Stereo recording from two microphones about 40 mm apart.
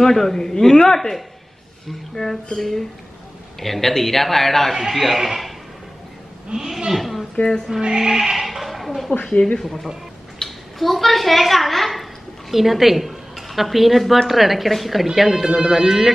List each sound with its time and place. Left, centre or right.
0.0 s a man's voice: centre
4.7 s a man's voice: centre
6.5 s speech: centre
6.9 s a man's voice: centre
8.0 s speech: centre
8.5 s a sound: centre
9.2 s speech: left
9.6 s a man's voice: centre